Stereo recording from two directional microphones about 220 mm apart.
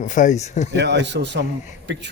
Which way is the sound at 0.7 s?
50° right (ahead or behind).